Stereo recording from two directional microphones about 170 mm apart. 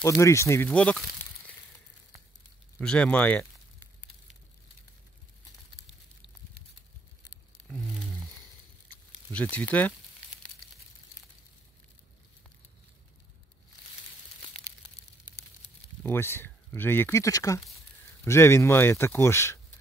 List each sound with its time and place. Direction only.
0.0 s speech: 15° left (ahead or behind)
2.8 s speech: 5° left (ahead or behind)
7.6 s a sound: 5° left (ahead or behind)
9.3 s speech: 10° left (ahead or behind)
16.0 s speech: 15° left (ahead or behind)